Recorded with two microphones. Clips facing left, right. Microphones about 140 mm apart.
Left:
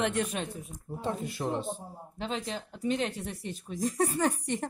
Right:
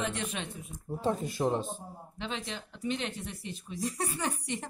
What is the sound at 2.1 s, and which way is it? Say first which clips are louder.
Speech: left 4 dB; 40° left (ahead or behind).